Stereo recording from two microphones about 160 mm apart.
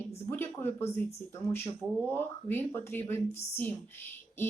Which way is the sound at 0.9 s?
15° left (ahead or behind).